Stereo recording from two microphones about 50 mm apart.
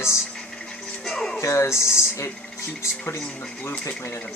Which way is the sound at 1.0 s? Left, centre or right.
Centre.